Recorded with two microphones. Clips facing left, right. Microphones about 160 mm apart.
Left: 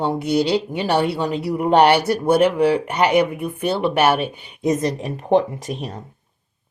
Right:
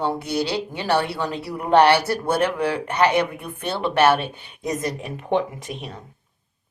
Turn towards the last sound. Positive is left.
turn(degrees=40)  # may be behind; listen again after turning